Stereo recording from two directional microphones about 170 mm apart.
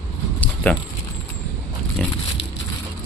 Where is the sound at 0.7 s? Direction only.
10° left (ahead or behind).